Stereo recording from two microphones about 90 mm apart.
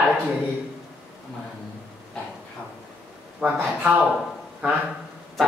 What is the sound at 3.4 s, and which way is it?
Speech, 15° right (ahead or behind).